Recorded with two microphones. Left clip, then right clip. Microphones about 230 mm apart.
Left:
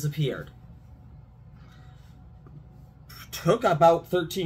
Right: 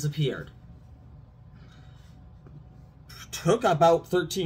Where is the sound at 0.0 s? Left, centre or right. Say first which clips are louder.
Even; centre.